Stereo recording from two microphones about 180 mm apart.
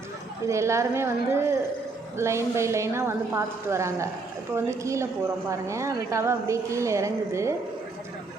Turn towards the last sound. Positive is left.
turn(degrees=-15)  # may be behind; listen again after turning